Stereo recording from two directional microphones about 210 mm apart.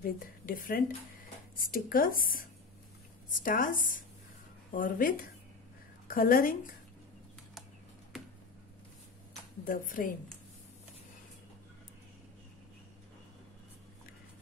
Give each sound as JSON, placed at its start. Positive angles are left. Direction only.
{"t": 0.0, "sound": "speech", "side_deg": 40}
{"t": 8.1, "sound": "a sound", "side_deg": 0}
{"t": 9.7, "sound": "speech", "side_deg": 40}